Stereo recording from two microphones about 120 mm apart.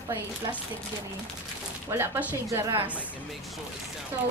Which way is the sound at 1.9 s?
20° right (ahead or behind).